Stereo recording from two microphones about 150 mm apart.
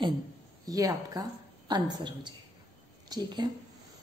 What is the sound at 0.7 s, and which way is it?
A woman's voice, 25° right (ahead or behind).